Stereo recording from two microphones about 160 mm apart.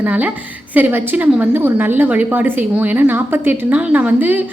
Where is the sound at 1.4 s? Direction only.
15° right (ahead or behind).